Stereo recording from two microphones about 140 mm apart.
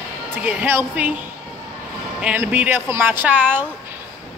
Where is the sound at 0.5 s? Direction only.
15° right (ahead or behind).